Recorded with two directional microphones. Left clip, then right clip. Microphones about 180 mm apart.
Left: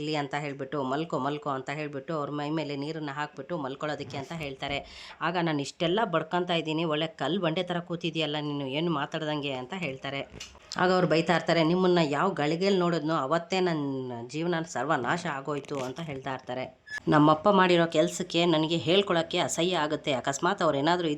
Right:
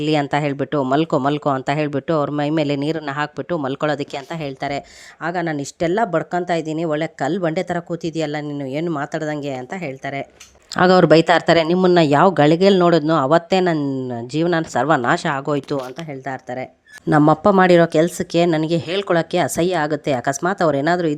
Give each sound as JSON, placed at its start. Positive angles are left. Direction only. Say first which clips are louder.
{"t": 0.0, "sound": "speech", "louder": "right 13 dB", "side_deg": -50}
{"t": 2.6, "sound": "speech", "louder": "right 13 dB", "side_deg": -50}
{"t": 5.2, "sound": "speech", "louder": "right 6 dB", "side_deg": -25}
{"t": 10.8, "sound": "speech", "louder": "right 12 dB", "side_deg": -50}
{"t": 13.7, "sound": "speech", "louder": "right 10 dB", "side_deg": -35}
{"t": 14.3, "sound": "speech", "louder": "right 12 dB", "side_deg": -45}
{"t": 16.2, "sound": "speech", "louder": "right 7 dB", "side_deg": -25}